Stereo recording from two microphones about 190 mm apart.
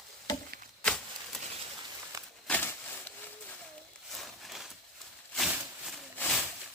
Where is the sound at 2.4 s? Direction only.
10° left (ahead or behind).